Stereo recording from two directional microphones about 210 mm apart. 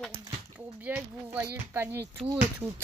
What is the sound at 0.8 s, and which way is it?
Speech, 10° right (ahead or behind).